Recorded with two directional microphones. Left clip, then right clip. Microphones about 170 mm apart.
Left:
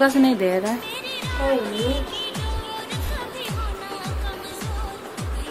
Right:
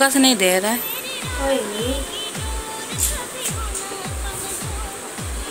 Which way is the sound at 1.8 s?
Centre (ahead or behind).